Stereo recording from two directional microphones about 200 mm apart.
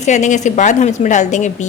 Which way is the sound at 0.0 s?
35° left (ahead or behind).